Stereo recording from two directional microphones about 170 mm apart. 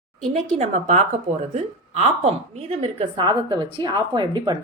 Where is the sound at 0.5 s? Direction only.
40° right (ahead or behind).